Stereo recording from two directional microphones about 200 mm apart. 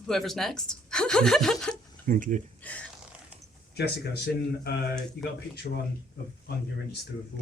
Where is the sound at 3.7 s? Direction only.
55° left (ahead or behind).